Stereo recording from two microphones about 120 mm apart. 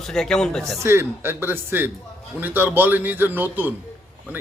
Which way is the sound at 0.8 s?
20° right (ahead or behind).